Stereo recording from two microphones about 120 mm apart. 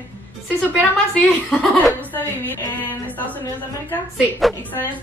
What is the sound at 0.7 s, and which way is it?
A woman's voice, 10° left (ahead or behind).